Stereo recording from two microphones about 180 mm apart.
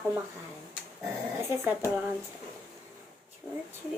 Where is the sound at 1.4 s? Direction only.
15° right (ahead or behind).